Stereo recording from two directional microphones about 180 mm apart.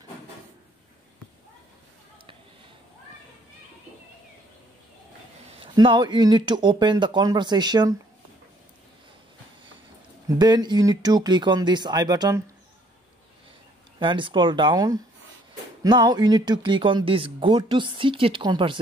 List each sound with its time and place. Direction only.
5.6 s speech: 25° right (ahead or behind)
10.2 s speech: 25° right (ahead or behind)
13.9 s speech: 25° right (ahead or behind)